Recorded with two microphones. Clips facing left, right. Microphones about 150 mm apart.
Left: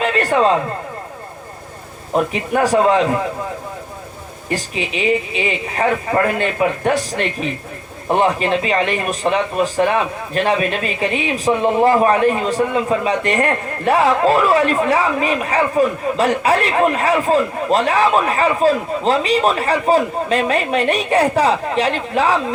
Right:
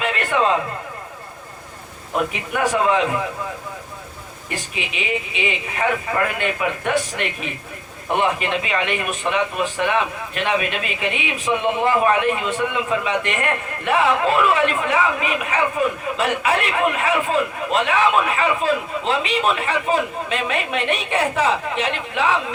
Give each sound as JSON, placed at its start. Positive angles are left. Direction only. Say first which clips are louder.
{"t": 0.0, "sound": "a sound", "louder": "left 5 dB", "side_deg": 35}
{"t": 2.3, "sound": "a man's voice", "louder": "left 6 dB", "side_deg": 35}
{"t": 4.4, "sound": "a man's voice", "louder": "left 7 dB", "side_deg": 35}